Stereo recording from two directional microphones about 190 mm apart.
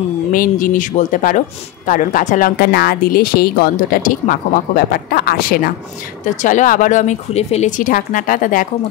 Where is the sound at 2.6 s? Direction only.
55° left (ahead or behind).